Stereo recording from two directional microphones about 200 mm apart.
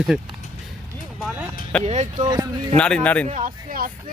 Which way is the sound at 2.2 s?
20° right (ahead or behind).